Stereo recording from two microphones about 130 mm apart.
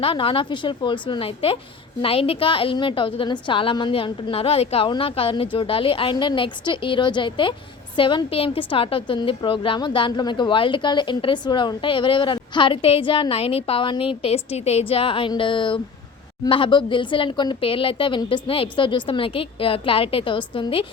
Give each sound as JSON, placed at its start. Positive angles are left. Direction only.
{"t": 0.0, "sound": "a woman's voice", "side_deg": 45}